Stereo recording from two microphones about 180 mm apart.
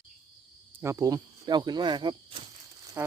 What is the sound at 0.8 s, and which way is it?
Cricket, 20° right (ahead or behind).